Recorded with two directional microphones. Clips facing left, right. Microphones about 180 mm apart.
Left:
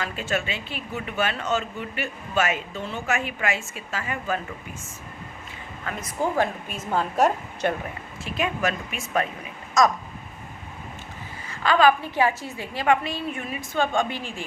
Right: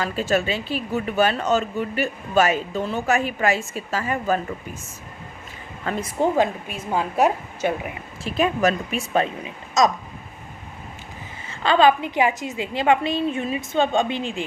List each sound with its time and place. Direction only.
0.0 s a woman's voice: 35° right (ahead or behind)
5.8 s a woman's voice: 30° right (ahead or behind); by 7.9 s 5° right (ahead or behind)
8.2 s a woman's voice: 35° right (ahead or behind)
11.4 s a woman's voice: 25° right (ahead or behind)